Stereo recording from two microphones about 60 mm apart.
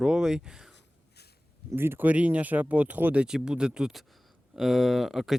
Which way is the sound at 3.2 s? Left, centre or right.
Centre.